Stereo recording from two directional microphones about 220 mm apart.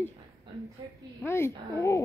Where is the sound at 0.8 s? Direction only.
20° right (ahead or behind).